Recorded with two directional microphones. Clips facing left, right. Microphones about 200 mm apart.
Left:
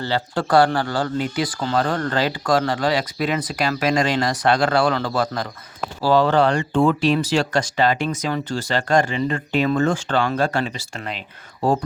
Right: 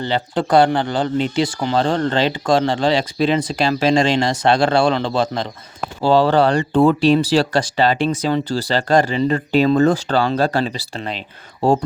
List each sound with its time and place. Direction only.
0.0 s speech: 20° right (ahead or behind)